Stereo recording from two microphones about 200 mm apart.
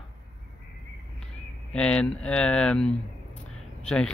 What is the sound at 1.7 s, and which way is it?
Speech, 5° left (ahead or behind).